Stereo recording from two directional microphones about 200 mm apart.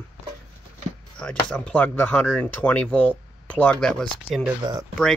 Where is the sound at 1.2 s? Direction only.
5° left (ahead or behind).